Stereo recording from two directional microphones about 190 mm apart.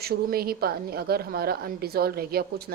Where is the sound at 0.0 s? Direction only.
55° right (ahead or behind).